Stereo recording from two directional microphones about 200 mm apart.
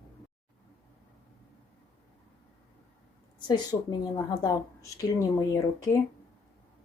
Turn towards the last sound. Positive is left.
turn(degrees=15)  # may be behind; listen again after turning